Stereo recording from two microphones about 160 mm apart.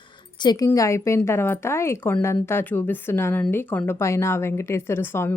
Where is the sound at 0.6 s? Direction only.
20° left (ahead or behind).